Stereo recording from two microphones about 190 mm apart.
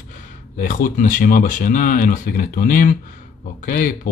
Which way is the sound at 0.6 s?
45° left (ahead or behind).